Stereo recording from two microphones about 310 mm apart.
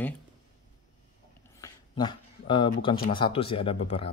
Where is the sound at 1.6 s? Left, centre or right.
Centre.